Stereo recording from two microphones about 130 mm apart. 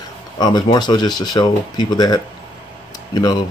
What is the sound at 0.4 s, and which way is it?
Speech, 35° left (ahead or behind).